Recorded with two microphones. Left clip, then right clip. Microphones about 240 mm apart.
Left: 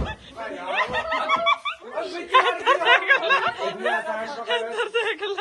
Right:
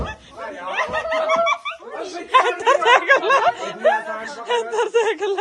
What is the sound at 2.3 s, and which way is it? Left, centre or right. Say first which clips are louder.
Snicker: right 3 dB; right.